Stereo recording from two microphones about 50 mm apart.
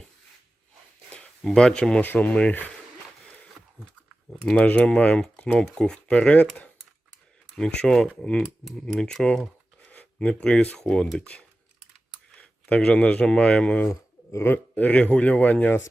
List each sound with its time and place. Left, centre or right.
1.5 s speech: centre
2.0 s speech: left
4.5 s speech: left
7.5 s speech: centre
9.8 s a sound: left
10.2 s speech: centre
12.4 s speech: left
14.3 s a man's voice: left
14.8 s speech: left